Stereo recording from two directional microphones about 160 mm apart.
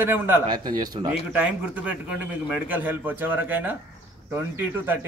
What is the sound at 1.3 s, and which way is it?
A man's voice, 10° right (ahead or behind).